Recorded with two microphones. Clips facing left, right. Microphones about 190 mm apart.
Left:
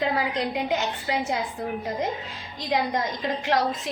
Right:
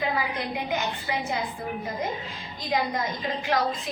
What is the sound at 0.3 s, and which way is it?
A woman's voice, 80° left.